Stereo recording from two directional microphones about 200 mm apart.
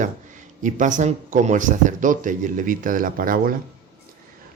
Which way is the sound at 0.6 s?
40° right (ahead or behind).